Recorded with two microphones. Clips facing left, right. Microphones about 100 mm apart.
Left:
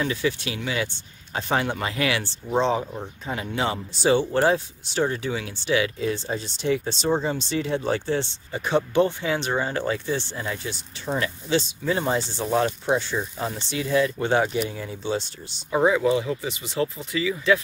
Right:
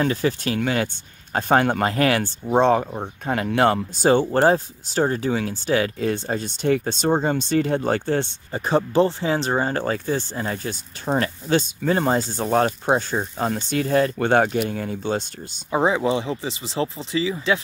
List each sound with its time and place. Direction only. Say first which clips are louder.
0.0 s speech: right 4 dB; 40° right (ahead or behind)
8.5 s speech: right 2 dB; 35° right (ahead or behind); by 15.2 s 50° right (ahead or behind)
15.7 s speech: even; 25° right (ahead or behind)